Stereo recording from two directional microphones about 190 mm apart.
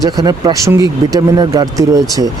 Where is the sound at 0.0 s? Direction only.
20° right (ahead or behind).